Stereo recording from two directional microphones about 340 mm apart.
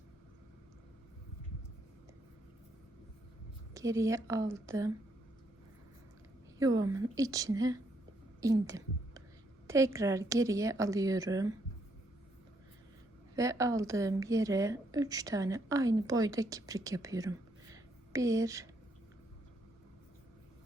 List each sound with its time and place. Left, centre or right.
3.8 s a woman's voice: centre
6.6 s a woman's voice: centre
13.3 s a woman's voice: centre